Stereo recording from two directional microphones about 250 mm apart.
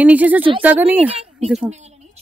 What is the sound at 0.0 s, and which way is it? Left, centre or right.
Speech, centre.